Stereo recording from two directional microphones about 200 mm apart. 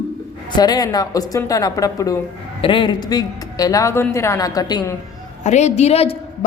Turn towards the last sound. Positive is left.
turn(degrees=30)  # may be behind; listen again after turning